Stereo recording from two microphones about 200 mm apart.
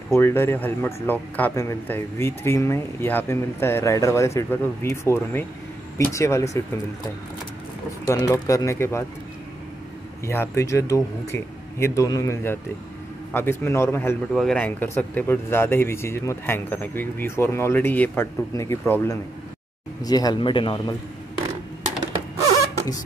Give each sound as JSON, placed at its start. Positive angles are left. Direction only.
{"t": 0.1, "sound": "speech", "side_deg": 10}
{"t": 8.1, "sound": "speech", "side_deg": 15}
{"t": 10.2, "sound": "a man's voice", "side_deg": 10}